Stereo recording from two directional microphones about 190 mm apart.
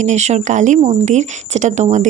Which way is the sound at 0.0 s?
35° right (ahead or behind).